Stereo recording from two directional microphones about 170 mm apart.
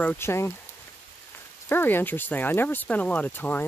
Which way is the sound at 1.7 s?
15° left (ahead or behind).